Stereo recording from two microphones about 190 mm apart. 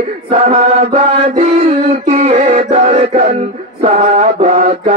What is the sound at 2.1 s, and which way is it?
Music, 35° right (ahead or behind).